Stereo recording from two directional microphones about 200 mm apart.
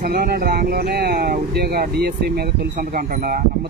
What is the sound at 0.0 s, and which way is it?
Speech, 50° right (ahead or behind).